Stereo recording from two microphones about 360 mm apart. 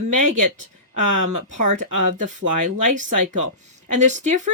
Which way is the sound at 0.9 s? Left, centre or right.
Right.